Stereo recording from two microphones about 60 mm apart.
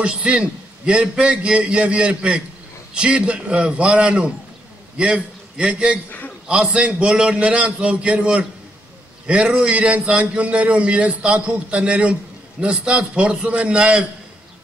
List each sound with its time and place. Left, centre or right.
0.0 s a man's voice: centre